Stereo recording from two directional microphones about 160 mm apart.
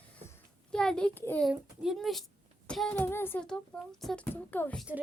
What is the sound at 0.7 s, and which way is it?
Speech, 5° left (ahead or behind).